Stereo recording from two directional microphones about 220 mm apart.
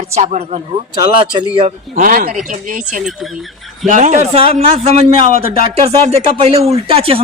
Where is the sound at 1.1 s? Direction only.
20° right (ahead or behind).